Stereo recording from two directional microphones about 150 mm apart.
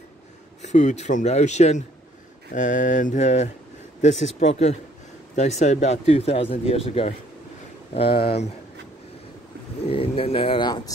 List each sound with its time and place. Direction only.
0.6 s speech: 50° left (ahead or behind)
2.5 s mantra: 60° left (ahead or behind)
4.0 s speech: 50° left (ahead or behind)
9.8 s speech: 40° left (ahead or behind)